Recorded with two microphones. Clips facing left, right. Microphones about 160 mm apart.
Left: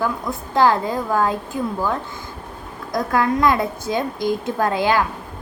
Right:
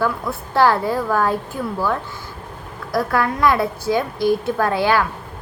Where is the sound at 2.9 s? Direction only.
20° left (ahead or behind).